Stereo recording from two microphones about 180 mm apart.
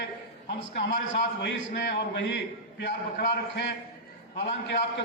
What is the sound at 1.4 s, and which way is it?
A man's voice, 70° left (ahead or behind).